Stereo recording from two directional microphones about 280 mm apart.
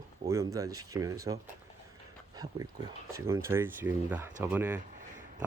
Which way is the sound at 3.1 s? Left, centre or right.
Centre.